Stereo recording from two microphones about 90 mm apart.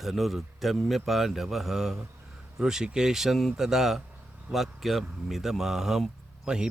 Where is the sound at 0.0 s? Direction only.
Centre (ahead or behind).